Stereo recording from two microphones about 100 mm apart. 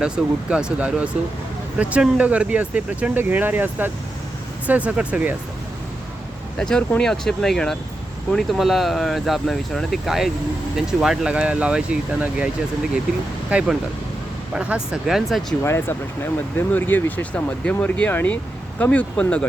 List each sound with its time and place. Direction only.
0.5 s speech: 10° right (ahead or behind)
6.6 s speech: 5° left (ahead or behind); by 12.5 s 10° right (ahead or behind)
13.5 s speech: 10° right (ahead or behind)
15.6 s speech: 25° left (ahead or behind)